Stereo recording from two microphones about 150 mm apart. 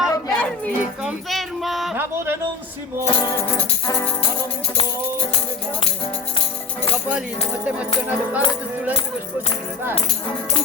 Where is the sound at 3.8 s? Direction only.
20° left (ahead or behind).